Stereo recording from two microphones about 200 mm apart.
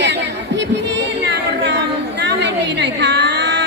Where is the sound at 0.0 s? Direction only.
60° right (ahead or behind).